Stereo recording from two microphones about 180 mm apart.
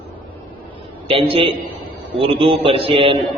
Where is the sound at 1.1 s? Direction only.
30° right (ahead or behind).